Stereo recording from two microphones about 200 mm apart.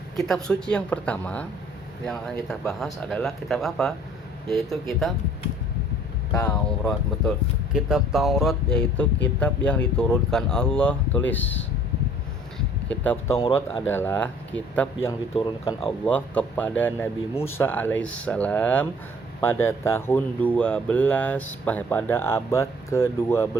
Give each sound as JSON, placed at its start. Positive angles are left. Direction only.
{"t": 0.2, "sound": "speech", "side_deg": 5}
{"t": 6.3, "sound": "speech", "side_deg": 5}
{"t": 12.5, "sound": "a sound", "side_deg": 5}
{"t": 13.8, "sound": "speech", "side_deg": 10}
{"t": 15.4, "sound": "speech", "side_deg": 25}
{"t": 16.0, "sound": "speech", "side_deg": 5}